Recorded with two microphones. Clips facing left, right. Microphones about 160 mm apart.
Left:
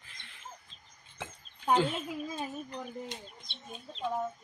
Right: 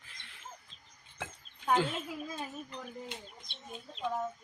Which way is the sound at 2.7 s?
40° left (ahead or behind).